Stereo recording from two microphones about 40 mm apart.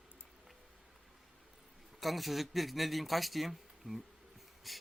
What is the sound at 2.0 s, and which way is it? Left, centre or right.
A man's voice, centre.